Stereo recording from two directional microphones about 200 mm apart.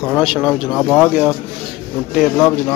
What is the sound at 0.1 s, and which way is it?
Speech, 5° right (ahead or behind).